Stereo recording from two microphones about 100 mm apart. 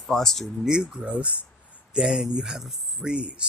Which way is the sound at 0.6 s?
10° right (ahead or behind).